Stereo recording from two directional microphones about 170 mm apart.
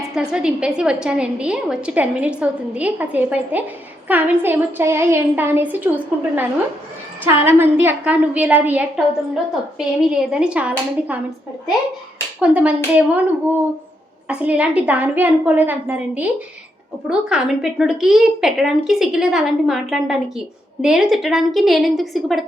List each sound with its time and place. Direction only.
0.1 s a woman's voice: 5° right (ahead or behind)
7.3 s a woman's voice: 15° right (ahead or behind)
12.4 s a woman's voice: 10° right (ahead or behind)
14.3 s a woman's voice: 10° right (ahead or behind)